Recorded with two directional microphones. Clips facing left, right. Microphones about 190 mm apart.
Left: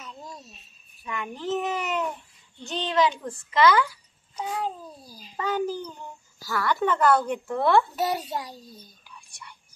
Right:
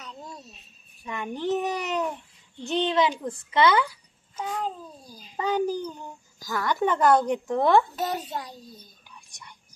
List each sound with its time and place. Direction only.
1.0 s a child's voice: 30° right (ahead or behind)
2.7 s a woman's voice: 25° right (ahead or behind)
5.0 s a child's voice: 10° left (ahead or behind)
5.3 s speech: 15° right (ahead or behind)
7.9 s a child's voice: 10° left (ahead or behind)